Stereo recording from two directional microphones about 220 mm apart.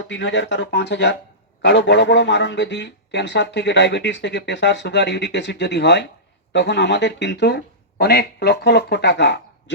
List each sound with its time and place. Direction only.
0.1 s a man's voice: 55° left (ahead or behind)